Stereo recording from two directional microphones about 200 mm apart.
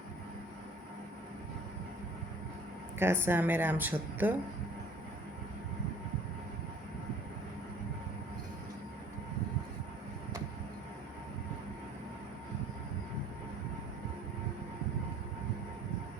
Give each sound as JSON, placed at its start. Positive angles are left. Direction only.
{"t": 3.0, "sound": "speech", "side_deg": -10}